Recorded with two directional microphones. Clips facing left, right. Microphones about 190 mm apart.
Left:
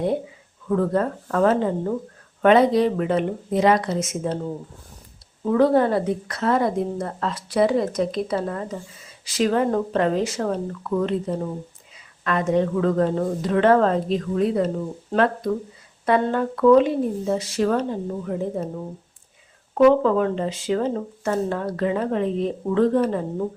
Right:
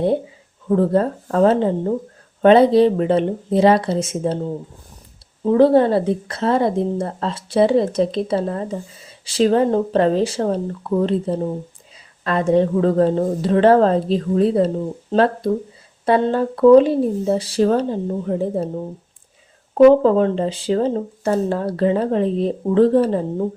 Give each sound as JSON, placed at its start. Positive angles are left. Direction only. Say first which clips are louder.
{"t": 0.7, "sound": "a woman's voice", "louder": "right 4 dB", "side_deg": -30}
{"t": 5.5, "sound": "a woman's voice", "louder": "right 4 dB", "side_deg": -30}
{"t": 19.7, "sound": "speech", "louder": "right 5 dB", "side_deg": -30}